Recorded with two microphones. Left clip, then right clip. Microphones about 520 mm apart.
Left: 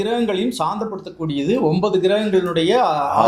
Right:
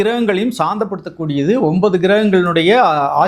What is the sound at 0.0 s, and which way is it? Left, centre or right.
Speech, right.